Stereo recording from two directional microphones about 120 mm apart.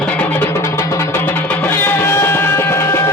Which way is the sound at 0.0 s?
10° left (ahead or behind).